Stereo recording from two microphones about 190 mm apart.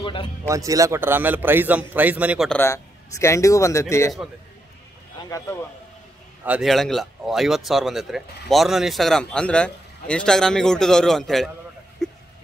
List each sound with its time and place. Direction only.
0.0 s speech: 25° left (ahead or behind)
0.5 s a man's voice: 15° right (ahead or behind)
2.6 s speech: 15° left (ahead or behind)
5.3 s a man's voice: 10° left (ahead or behind)
6.4 s speech: 5° right (ahead or behind)
12.0 s a sound: centre (ahead or behind)